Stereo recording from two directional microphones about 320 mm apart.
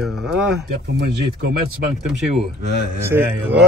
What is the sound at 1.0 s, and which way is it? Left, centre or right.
Speech, right.